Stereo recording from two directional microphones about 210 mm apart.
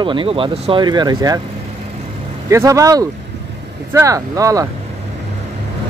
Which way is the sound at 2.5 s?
15° right (ahead or behind).